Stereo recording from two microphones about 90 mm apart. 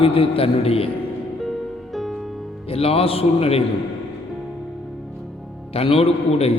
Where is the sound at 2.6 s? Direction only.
90° left.